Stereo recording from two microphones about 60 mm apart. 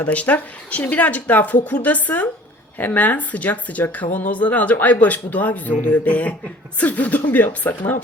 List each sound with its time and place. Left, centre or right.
0.0 s speech: left